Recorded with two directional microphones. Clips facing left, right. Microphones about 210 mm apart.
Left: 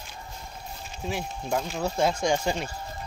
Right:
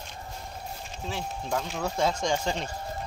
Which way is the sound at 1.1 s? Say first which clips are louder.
Left 2 dB; 15° left (ahead or behind).